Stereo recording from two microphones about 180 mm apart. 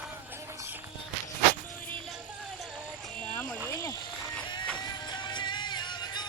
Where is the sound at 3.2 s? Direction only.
10° left (ahead or behind).